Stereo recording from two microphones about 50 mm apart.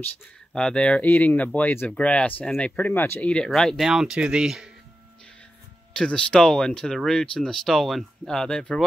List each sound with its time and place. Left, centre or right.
0.6 s speech: centre
1.0 s speech: left
2.9 s speech: left
3.2 s speech: left
3.4 s speech: centre
3.8 s speech: centre
4.2 s speech: right
5.9 s speech: left